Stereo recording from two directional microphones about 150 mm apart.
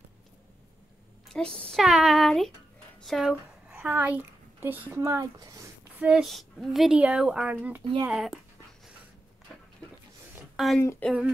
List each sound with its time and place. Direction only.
1.3 s a woman's voice: 5° left (ahead or behind); by 5.7 s 25° right (ahead or behind)
5.9 s speech: 5° right (ahead or behind)
10.5 s a sound: centre (ahead or behind)
10.8 s speech: 15° left (ahead or behind)